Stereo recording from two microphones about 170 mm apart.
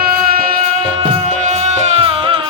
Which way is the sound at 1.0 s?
40° right (ahead or behind).